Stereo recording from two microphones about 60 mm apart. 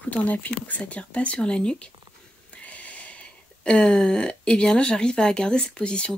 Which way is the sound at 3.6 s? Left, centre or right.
Centre.